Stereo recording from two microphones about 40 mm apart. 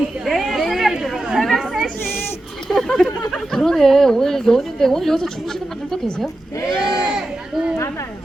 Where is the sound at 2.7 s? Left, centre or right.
Centre.